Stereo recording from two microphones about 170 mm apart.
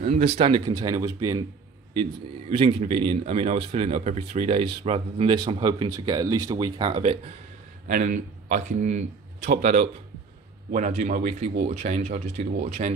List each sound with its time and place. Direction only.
0.0 s speech: 40° right (ahead or behind)
2.5 s speech: 35° right (ahead or behind)
7.8 s speech: 50° right (ahead or behind)